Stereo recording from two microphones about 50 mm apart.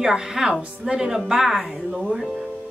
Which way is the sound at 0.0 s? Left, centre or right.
Centre.